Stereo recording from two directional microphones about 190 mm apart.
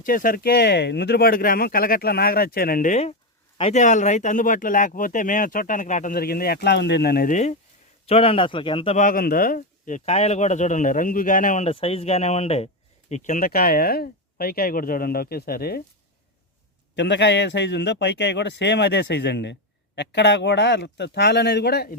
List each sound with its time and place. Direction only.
0.0 s speech: 50° left (ahead or behind)
8.0 s speech: 30° left (ahead or behind); by 15.8 s 55° left (ahead or behind)
16.9 s a man's voice: 65° left (ahead or behind)